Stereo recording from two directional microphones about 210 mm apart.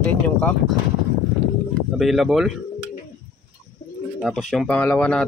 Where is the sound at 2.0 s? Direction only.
Centre (ahead or behind).